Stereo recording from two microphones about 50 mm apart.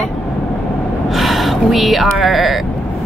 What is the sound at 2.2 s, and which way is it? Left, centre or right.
Speech, centre.